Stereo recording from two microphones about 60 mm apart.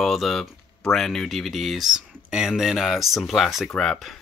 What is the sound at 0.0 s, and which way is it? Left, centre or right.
Speech, centre.